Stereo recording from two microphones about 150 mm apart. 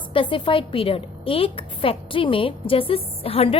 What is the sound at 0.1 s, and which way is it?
A woman's voice, 35° left (ahead or behind).